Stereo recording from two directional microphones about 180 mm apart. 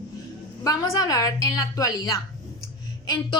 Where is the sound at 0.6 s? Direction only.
20° left (ahead or behind).